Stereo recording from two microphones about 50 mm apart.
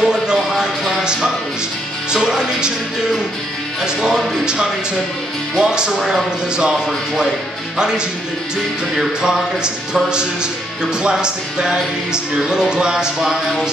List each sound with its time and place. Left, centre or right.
0.0 s a sound: centre
2.1 s speech: centre
5.9 s a man's voice: centre
8.9 s speech: centre